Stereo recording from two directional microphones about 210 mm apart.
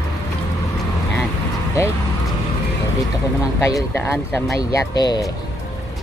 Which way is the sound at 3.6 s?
10° left (ahead or behind).